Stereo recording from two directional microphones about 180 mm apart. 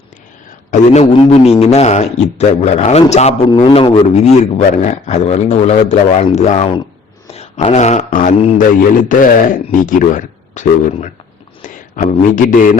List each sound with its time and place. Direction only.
0.7 s a man's voice: 35° left (ahead or behind)